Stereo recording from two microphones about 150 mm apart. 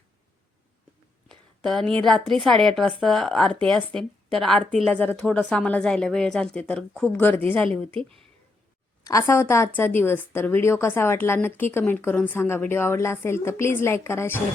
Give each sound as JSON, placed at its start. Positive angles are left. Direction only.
{"t": 1.3, "sound": "a sound", "side_deg": 5}
{"t": 2.0, "sound": "a woman's voice", "side_deg": 5}
{"t": 9.0, "sound": "speech", "side_deg": 20}